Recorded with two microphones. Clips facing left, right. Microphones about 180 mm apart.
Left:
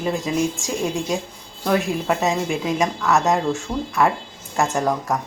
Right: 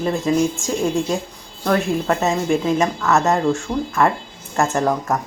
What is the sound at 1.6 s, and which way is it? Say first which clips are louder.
Speech: right 2 dB; 5° left (ahead or behind).